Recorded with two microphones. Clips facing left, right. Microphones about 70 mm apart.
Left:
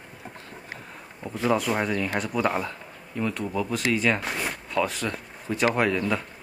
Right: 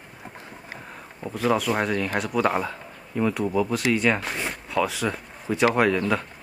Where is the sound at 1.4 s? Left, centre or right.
Centre.